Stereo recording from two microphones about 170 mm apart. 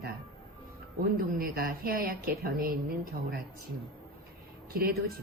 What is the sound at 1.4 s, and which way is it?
A woman's voice, 60° right (ahead or behind).